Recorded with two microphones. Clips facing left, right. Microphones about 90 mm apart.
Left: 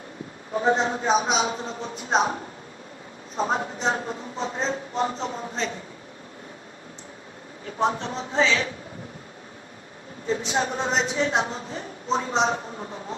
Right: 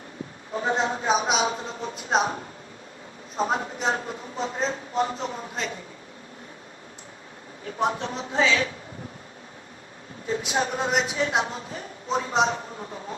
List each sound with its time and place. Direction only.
0.5 s speech: 35° left (ahead or behind)
3.3 s speech: 30° left (ahead or behind)
7.8 s a woman's voice: 30° left (ahead or behind)
10.2 s speech: 30° left (ahead or behind)